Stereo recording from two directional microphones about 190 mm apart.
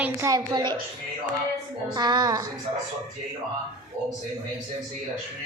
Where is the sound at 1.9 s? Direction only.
20° right (ahead or behind).